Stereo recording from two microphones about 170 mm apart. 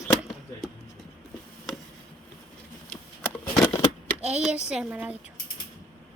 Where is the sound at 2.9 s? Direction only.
15° left (ahead or behind).